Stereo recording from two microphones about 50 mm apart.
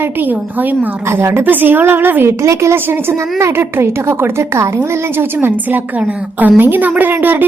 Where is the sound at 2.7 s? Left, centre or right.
Right.